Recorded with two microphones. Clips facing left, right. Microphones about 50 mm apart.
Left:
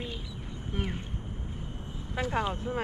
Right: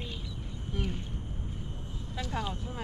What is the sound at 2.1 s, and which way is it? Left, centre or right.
Speech, left.